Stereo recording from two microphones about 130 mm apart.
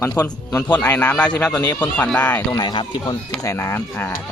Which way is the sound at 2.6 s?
35° left (ahead or behind).